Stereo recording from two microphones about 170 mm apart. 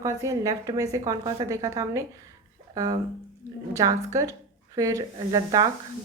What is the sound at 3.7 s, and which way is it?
A woman's voice, 20° right (ahead or behind).